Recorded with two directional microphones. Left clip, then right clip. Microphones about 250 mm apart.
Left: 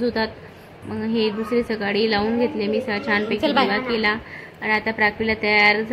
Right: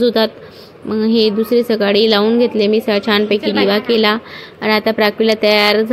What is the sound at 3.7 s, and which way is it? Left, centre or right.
A woman's voice, right.